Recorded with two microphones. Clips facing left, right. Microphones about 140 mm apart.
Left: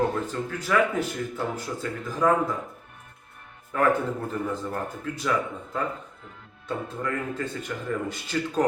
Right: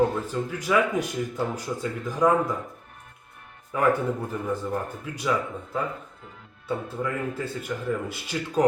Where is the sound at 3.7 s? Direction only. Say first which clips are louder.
Even; 10° right (ahead or behind).